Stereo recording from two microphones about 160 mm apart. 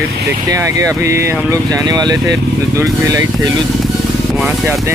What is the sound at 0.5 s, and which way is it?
Speech, 20° right (ahead or behind).